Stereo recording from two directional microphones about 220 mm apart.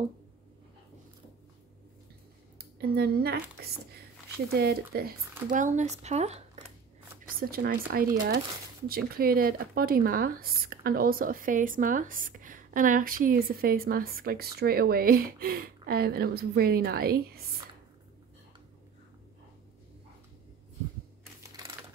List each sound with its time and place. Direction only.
2.6 s speech: 45° right (ahead or behind)
4.6 s speech: 45° right (ahead or behind)
7.3 s speech: 45° right (ahead or behind)
21.4 s a sound: 15° right (ahead or behind)